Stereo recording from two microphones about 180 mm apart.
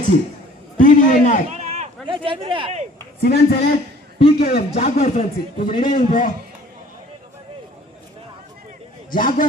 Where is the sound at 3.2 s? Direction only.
60° left (ahead or behind).